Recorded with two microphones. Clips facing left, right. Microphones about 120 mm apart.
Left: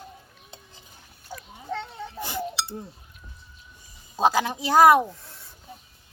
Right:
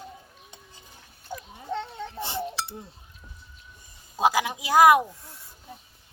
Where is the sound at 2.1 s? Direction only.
30° right (ahead or behind).